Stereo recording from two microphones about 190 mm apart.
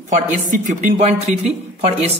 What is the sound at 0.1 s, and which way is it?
Speech, 40° right (ahead or behind).